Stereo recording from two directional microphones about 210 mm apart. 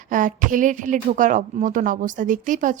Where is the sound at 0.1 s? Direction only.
40° right (ahead or behind).